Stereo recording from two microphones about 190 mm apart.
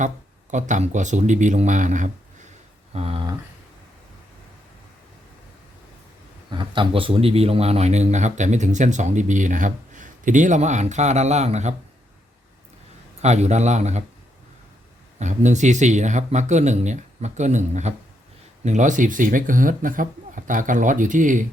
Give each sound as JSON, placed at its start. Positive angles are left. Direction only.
{"t": 0.5, "sound": "speech", "side_deg": -40}
{"t": 6.5, "sound": "speech", "side_deg": -25}
{"t": 13.2, "sound": "speech", "side_deg": -35}
{"t": 15.2, "sound": "a man's voice", "side_deg": -40}